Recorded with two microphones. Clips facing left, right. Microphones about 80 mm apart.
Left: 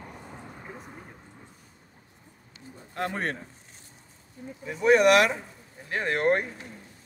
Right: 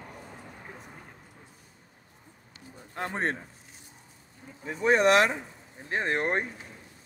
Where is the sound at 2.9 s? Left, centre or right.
Right.